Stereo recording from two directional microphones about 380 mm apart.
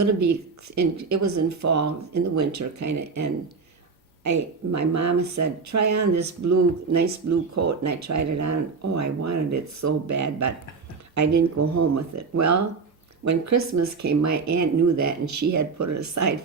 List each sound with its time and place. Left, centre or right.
0.0 s speech: right